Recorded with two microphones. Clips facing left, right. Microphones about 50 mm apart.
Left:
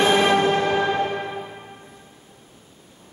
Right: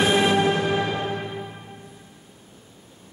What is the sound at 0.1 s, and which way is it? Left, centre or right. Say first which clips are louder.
Music: left 2 dB; left.